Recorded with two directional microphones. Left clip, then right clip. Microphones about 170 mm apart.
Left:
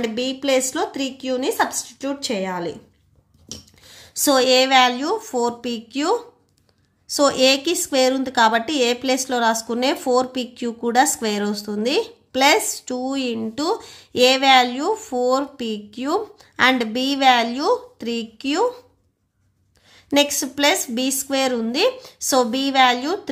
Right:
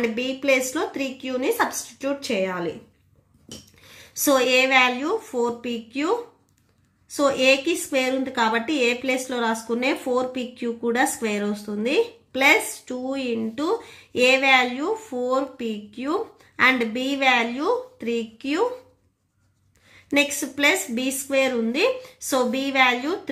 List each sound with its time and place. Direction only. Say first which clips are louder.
0.0 s speech: left 1 dB; 35° left (ahead or behind)
3.8 s speech: left 3 dB; 35° left (ahead or behind)
7.2 s a woman's voice: left 2 dB; 45° left (ahead or behind)
19.9 s a woman's voice: left 3 dB; 40° left (ahead or behind)